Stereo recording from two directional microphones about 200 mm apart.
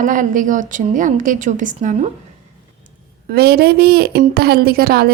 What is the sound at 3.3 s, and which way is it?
A woman's voice, 50° right (ahead or behind).